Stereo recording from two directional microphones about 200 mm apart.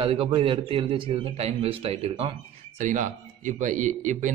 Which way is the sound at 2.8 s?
40° right (ahead or behind).